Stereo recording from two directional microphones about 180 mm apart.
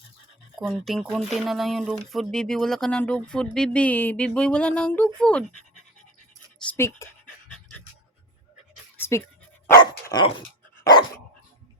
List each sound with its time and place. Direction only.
0.6 s speech: centre (ahead or behind)
6.6 s speech: 10° left (ahead or behind)
9.0 s pant: 15° left (ahead or behind)
9.8 s speech: 25° left (ahead or behind)
10.8 s dog: 20° left (ahead or behind)